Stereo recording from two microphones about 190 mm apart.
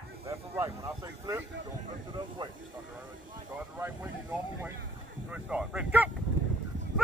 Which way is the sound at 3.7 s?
10° right (ahead or behind).